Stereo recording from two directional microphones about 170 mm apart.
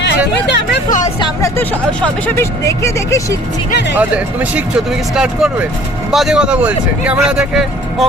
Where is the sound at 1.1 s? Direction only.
25° left (ahead or behind).